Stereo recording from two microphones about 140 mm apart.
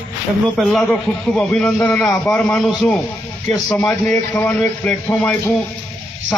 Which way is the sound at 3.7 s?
10° left (ahead or behind).